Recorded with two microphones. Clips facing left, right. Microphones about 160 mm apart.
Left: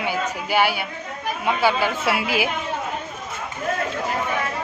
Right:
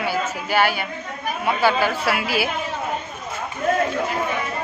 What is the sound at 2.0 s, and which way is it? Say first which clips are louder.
Speech: even; 15° left (ahead or behind).